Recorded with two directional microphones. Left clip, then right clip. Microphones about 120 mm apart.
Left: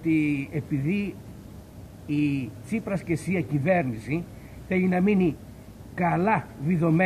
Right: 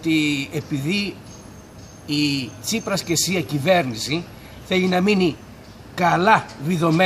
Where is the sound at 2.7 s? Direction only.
30° right (ahead or behind).